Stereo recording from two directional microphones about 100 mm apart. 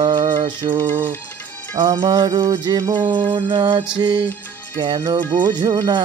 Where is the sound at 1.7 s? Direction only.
55° right (ahead or behind).